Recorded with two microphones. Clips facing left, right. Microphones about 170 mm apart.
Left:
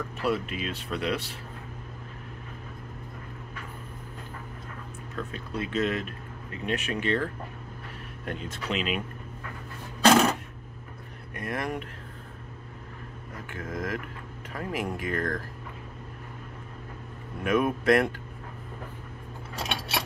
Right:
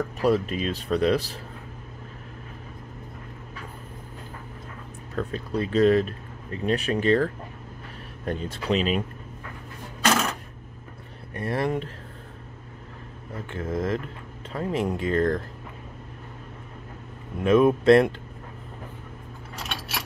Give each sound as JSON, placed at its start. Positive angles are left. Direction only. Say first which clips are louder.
{"t": 0.0, "sound": "speech", "louder": "right 6 dB", "side_deg": -40}
{"t": 5.1, "sound": "speech", "louder": "right 6 dB", "side_deg": -35}
{"t": 8.3, "sound": "speech", "louder": "right 7 dB", "side_deg": -35}
{"t": 11.3, "sound": "speech", "louder": "right 6 dB", "side_deg": -30}
{"t": 13.5, "sound": "speech", "louder": "right 6 dB", "side_deg": -30}
{"t": 17.4, "sound": "speech", "louder": "right 7 dB", "side_deg": -25}